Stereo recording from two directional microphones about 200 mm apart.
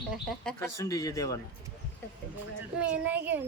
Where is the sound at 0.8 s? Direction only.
15° left (ahead or behind).